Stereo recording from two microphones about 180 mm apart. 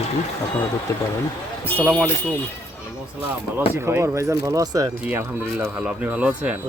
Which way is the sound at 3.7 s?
15° right (ahead or behind).